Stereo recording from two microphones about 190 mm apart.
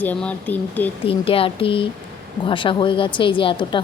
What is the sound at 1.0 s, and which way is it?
A woman's voice, 30° left (ahead or behind).